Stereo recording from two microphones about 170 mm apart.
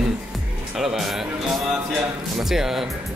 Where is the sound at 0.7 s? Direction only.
5° right (ahead or behind).